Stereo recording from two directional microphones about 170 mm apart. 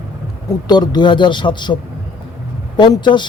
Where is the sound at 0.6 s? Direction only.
25° left (ahead or behind).